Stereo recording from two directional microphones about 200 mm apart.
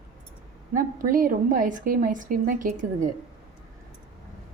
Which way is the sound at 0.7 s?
45° right (ahead or behind).